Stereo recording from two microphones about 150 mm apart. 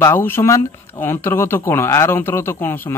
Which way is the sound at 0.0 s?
15° left (ahead or behind).